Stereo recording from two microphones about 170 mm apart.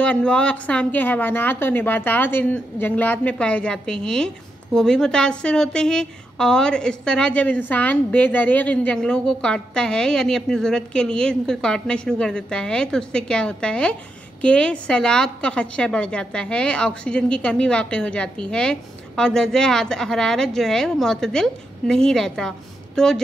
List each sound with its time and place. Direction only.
0.0 s a woman's voice: 5° left (ahead or behind)